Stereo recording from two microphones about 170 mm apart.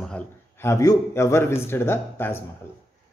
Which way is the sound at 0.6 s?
15° left (ahead or behind).